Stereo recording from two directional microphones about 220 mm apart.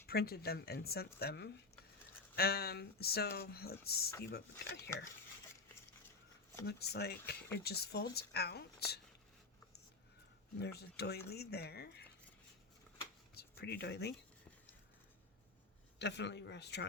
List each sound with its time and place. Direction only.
0.1 s speech: 45° left (ahead or behind)
6.7 s speech: 45° left (ahead or behind)
10.6 s speech: 45° left (ahead or behind)
13.3 s speech: 45° left (ahead or behind)
16.0 s speech: 50° left (ahead or behind)